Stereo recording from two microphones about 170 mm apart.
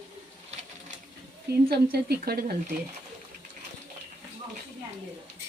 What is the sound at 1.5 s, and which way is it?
A woman's voice, 75° right (ahead or behind).